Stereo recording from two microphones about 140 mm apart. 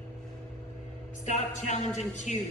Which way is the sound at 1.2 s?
55° left (ahead or behind).